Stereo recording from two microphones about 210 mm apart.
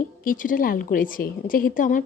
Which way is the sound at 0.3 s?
40° left (ahead or behind).